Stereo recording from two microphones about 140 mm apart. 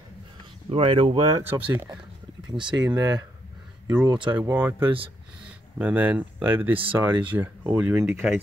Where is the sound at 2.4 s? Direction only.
35° right (ahead or behind).